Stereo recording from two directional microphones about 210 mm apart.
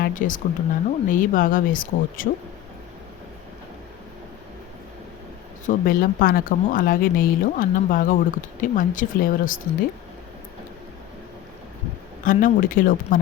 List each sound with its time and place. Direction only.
0.0 s speech: 40° left (ahead or behind)
5.6 s speech: 45° left (ahead or behind)
12.2 s speech: 40° left (ahead or behind)